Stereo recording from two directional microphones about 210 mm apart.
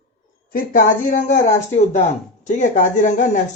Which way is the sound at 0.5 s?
40° left (ahead or behind).